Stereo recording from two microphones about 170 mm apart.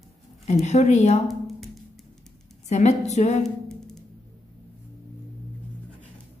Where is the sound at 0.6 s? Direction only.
40° left (ahead or behind).